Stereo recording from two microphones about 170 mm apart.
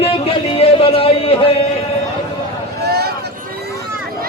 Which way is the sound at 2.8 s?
70° right (ahead or behind).